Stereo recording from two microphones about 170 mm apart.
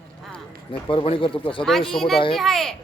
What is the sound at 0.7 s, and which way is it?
Speech, 35° left (ahead or behind).